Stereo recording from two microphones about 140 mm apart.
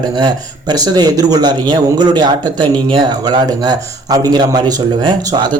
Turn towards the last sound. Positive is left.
turn(degrees=-30)  # may be behind; listen again after turning